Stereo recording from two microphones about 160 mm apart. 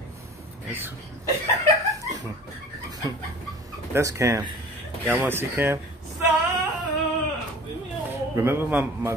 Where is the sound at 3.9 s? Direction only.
20° right (ahead or behind).